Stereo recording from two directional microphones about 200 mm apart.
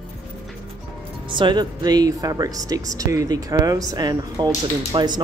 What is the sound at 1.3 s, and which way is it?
Speech, 25° right (ahead or behind).